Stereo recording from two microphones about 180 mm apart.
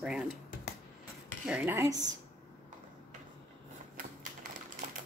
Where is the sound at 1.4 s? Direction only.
5° right (ahead or behind).